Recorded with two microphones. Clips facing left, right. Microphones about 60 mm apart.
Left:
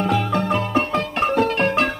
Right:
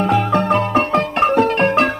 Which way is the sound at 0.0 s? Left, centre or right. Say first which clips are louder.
Right 4 dB; right.